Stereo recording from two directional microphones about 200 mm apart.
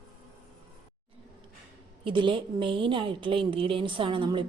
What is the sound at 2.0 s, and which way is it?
A woman's voice, 25° right (ahead or behind).